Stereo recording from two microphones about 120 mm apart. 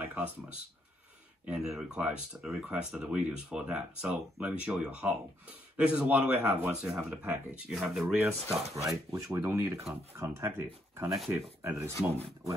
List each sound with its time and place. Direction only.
0.0 s a sound: 15° right (ahead or behind)
1.5 s speech: 5° right (ahead or behind)
8.7 s speech: 25° right (ahead or behind)